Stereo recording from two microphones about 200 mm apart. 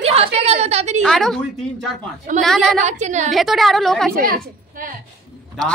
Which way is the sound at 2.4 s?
Centre (ahead or behind).